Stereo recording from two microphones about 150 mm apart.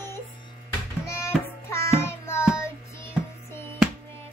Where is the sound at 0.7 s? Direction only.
15° left (ahead or behind).